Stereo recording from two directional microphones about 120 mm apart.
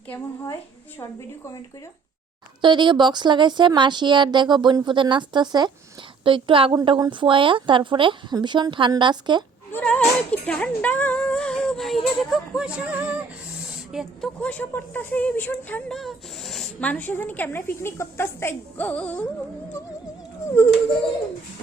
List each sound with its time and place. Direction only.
2.6 s speech: 40° right (ahead or behind)
9.7 s a woman's voice: 10° left (ahead or behind); by 13.2 s 15° right (ahead or behind)
13.9 s speech: 5° right (ahead or behind)
14.4 s a woman's voice: 15° left (ahead or behind)
15.9 s speech: centre (ahead or behind)
16.8 s a woman's voice: 15° left (ahead or behind)